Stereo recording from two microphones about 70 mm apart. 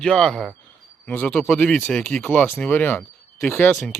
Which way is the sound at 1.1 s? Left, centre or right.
Left.